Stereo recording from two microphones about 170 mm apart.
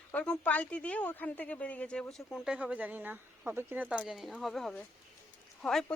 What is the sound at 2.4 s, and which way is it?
Speech, 5° right (ahead or behind).